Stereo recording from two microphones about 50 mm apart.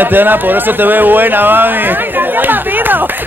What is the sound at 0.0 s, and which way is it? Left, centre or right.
Speech, right.